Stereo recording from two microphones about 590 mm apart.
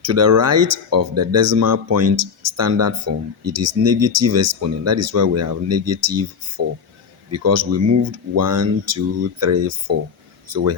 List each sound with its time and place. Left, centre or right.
0.0 s speech: right